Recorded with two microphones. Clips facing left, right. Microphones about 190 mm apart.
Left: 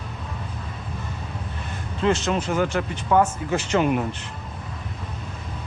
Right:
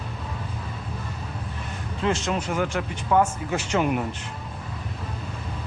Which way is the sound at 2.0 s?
10° right (ahead or behind).